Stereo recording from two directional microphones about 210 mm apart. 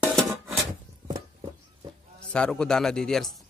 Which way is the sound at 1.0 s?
20° right (ahead or behind).